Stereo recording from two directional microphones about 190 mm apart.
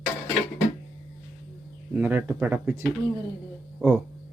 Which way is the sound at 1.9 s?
10° right (ahead or behind).